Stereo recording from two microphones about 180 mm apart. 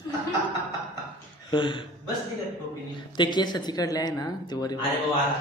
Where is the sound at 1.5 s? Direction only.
25° left (ahead or behind).